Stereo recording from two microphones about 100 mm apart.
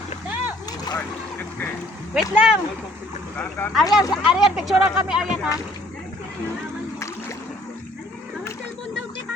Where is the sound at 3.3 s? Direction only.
15° left (ahead or behind).